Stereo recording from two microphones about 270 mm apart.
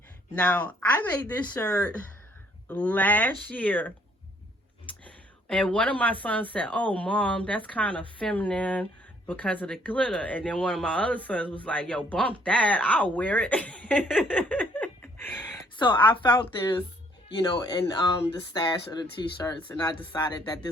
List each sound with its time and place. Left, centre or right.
0.3 s speech: centre
5.5 s speech: centre
15.8 s speech: centre
16.2 s speech: centre
17.2 s speech: centre